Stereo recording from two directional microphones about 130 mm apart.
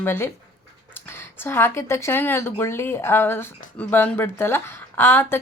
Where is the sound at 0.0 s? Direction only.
20° left (ahead or behind).